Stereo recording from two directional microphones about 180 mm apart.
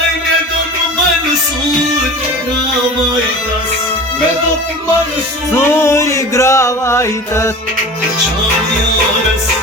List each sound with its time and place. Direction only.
5.5 s music: 15° left (ahead or behind)